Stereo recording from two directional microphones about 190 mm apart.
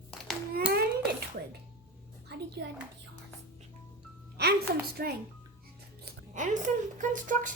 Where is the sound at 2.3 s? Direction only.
65° right (ahead or behind).